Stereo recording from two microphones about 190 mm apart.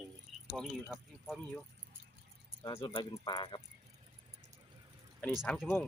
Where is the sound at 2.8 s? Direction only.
25° left (ahead or behind).